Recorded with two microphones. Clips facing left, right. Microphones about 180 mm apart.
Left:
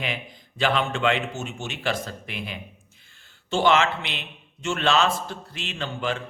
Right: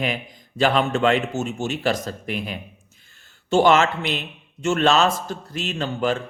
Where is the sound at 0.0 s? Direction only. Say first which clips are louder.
Right 5 dB; 40° right (ahead or behind).